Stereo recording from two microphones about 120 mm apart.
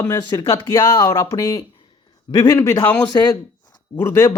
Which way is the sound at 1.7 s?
45° left (ahead or behind).